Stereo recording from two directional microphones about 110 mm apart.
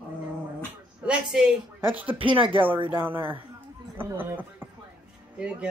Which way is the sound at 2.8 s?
20° right (ahead or behind).